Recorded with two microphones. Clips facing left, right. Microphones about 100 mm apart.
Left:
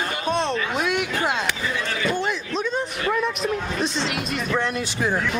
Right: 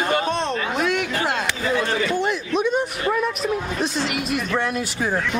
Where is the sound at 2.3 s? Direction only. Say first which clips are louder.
Right 4 dB; 15° right (ahead or behind).